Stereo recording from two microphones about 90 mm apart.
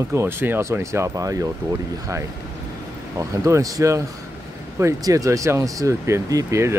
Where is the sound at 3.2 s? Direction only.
40° right (ahead or behind).